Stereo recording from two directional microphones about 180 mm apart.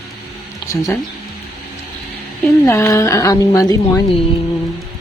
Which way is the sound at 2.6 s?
15° left (ahead or behind).